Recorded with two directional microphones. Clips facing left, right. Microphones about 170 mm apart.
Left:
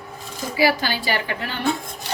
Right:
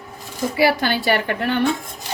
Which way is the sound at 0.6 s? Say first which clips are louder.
Right 2 dB; 60° right (ahead or behind).